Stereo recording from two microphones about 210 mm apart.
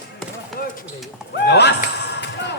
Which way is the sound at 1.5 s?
55° left (ahead or behind).